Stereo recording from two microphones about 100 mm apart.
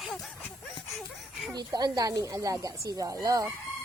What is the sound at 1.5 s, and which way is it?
Speech, 40° right (ahead or behind).